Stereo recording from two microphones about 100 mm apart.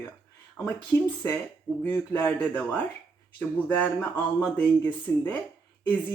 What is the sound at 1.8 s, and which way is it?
Speech, 25° left (ahead or behind).